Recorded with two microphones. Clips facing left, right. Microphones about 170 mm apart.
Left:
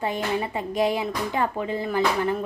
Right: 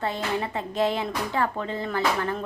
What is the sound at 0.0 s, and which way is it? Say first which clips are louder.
Speech: left 2 dB; 15° left (ahead or behind).